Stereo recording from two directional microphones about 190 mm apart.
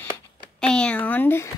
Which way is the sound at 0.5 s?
5° left (ahead or behind).